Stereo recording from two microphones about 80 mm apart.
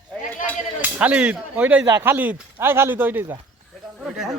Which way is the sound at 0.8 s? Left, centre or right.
Centre.